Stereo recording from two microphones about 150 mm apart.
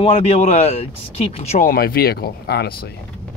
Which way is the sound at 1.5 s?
75° left (ahead or behind).